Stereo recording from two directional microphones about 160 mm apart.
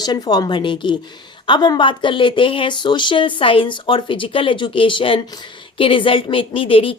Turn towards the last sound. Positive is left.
turn(degrees=35)  # may be behind; listen again after turning